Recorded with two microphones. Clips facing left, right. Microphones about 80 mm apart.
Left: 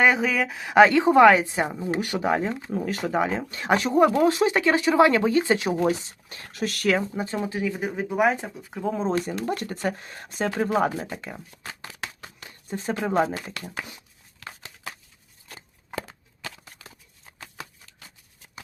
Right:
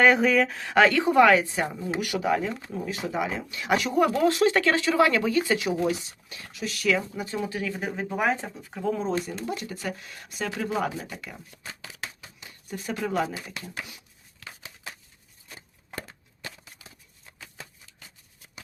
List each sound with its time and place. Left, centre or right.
0.0 s a woman's voice: centre; by 2.6 s left
2.7 s speech: left
7.2 s speech: left
7.6 s speech: centre
8.9 s a woman's voice: left
9.2 s speech: left
12.0 s a sound: left
12.5 s a sound: left
13.4 s speech: left
16.0 s a sound: left